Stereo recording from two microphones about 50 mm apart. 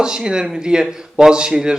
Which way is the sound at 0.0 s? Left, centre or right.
Centre.